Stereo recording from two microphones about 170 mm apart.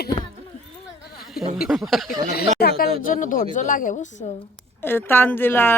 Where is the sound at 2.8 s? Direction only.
50° left (ahead or behind).